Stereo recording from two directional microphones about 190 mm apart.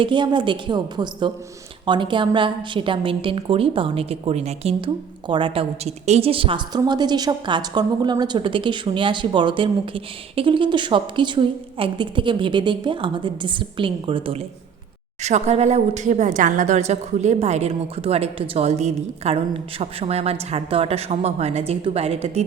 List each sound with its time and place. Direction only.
0.0 s a woman's voice: 25° right (ahead or behind)